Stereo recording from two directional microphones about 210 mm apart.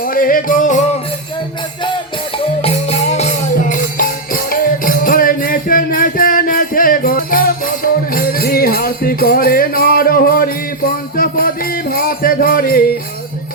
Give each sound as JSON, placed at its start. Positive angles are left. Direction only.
{"t": 0.0, "sound": "music", "side_deg": 40}
{"t": 2.6, "sound": "music", "side_deg": 30}